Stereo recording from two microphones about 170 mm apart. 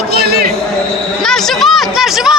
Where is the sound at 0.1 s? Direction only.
65° right (ahead or behind).